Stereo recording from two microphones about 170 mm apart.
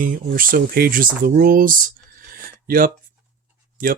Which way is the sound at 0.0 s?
55° right (ahead or behind).